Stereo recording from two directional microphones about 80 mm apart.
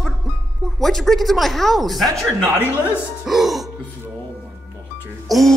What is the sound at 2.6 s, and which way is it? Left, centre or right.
Speech, left.